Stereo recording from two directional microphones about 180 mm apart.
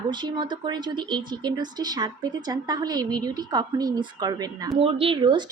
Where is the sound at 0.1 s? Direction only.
25° right (ahead or behind).